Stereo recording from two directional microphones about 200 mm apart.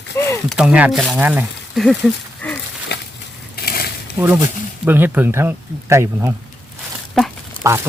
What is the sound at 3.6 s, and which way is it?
Mechanisms, 50° left (ahead or behind).